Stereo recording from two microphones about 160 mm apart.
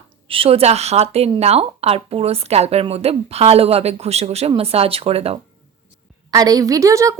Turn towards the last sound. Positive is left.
turn(degrees=-20)  # may be behind; listen again after turning